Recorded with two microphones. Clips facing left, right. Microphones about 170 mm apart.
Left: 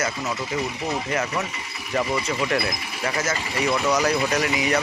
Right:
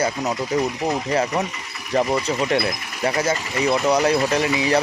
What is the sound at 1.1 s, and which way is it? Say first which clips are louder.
Speech: right 5 dB; 35° right (ahead or behind).